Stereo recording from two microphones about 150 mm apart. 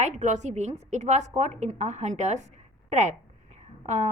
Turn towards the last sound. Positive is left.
turn(degrees=-50)  # may be behind; listen again after turning